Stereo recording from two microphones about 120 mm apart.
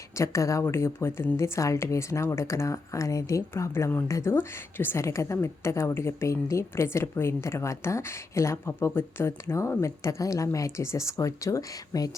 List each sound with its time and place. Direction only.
0.2 s a woman's voice: 25° left (ahead or behind)